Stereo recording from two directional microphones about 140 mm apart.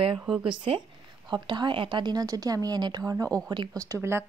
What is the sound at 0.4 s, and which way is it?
Speech, 35° right (ahead or behind).